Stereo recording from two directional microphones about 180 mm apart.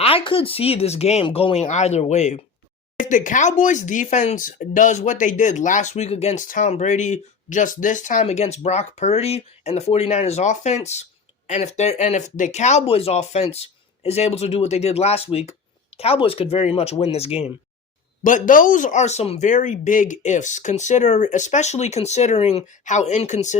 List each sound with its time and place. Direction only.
0.0 s speech: 30° left (ahead or behind)
18.2 s speech: 45° left (ahead or behind)